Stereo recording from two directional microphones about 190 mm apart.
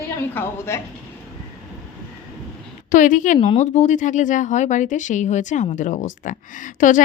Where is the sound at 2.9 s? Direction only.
45° left (ahead or behind).